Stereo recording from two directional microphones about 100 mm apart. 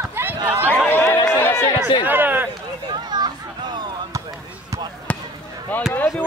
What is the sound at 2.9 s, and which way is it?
Children playing, 45° right (ahead or behind).